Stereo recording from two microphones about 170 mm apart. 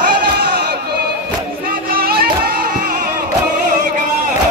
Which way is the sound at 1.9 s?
60° right (ahead or behind).